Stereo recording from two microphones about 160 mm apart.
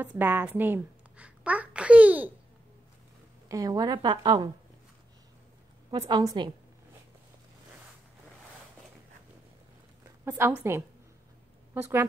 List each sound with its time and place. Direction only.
0.0 s a woman's voice: 10° right (ahead or behind)
3.4 s a woman's voice: 20° right (ahead or behind)
5.9 s a woman's voice: 30° right (ahead or behind)
10.2 s a woman's voice: 15° right (ahead or behind)
11.7 s a woman's voice: 15° right (ahead or behind)